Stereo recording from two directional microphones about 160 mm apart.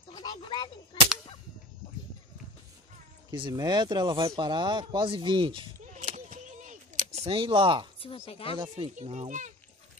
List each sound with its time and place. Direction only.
0.1 s a sound: 25° left (ahead or behind)
3.3 s speech: 25° right (ahead or behind)
5.9 s a sound: 50° right (ahead or behind); by 7.9 s 30° right (ahead or behind)
8.0 s speech: 35° left (ahead or behind)
8.5 s speech: 35° right (ahead or behind)
8.9 s a child's voice: 45° right (ahead or behind)